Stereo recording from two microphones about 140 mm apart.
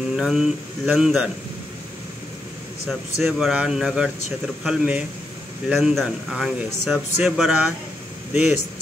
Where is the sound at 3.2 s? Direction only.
5° right (ahead or behind).